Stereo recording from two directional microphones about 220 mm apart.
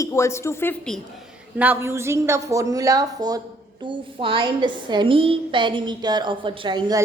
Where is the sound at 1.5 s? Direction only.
10° right (ahead or behind).